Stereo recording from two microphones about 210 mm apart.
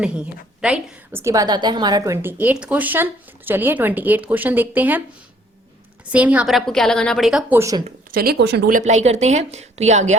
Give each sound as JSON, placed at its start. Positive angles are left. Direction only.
{"t": 0.6, "sound": "a woman's voice", "side_deg": -10}
{"t": 6.1, "sound": "a woman's voice", "side_deg": -5}
{"t": 8.1, "sound": "speech", "side_deg": -45}